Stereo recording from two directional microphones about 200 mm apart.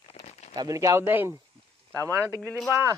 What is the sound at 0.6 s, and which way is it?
Speech, 15° right (ahead or behind).